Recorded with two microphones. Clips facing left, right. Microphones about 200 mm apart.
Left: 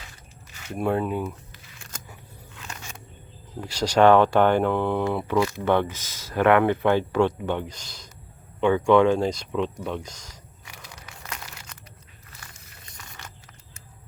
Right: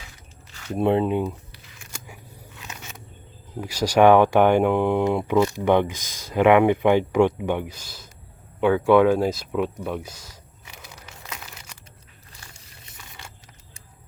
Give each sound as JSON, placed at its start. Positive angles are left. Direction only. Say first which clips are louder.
{"t": 0.8, "sound": "speech", "louder": "right 4 dB", "side_deg": -20}
{"t": 3.6, "sound": "speech", "louder": "right 2 dB", "side_deg": -10}
{"t": 11.3, "sound": "crumpling", "louder": "even", "side_deg": -10}